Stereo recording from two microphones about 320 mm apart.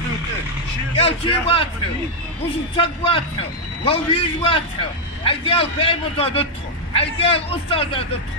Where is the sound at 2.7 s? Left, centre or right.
Centre.